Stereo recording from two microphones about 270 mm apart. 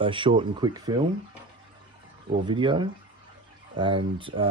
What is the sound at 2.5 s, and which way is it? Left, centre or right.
Speech, centre.